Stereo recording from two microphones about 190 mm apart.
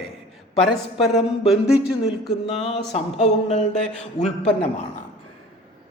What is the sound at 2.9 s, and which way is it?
Speech, 35° left (ahead or behind).